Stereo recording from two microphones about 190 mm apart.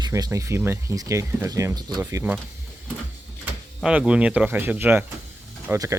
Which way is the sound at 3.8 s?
5° right (ahead or behind).